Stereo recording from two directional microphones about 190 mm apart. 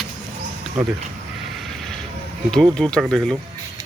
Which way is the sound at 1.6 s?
Centre (ahead or behind).